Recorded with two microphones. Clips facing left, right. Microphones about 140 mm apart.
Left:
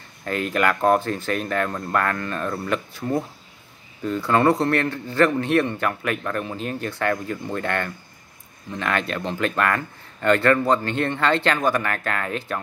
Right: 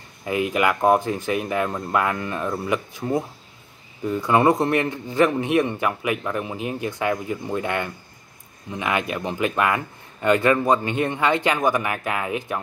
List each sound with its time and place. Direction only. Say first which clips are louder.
0.2 s a man's voice: right 1 dB; 10° right (ahead or behind)